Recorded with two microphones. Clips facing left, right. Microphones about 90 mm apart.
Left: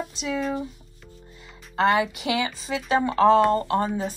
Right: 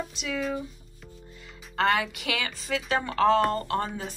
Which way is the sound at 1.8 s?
20° left (ahead or behind).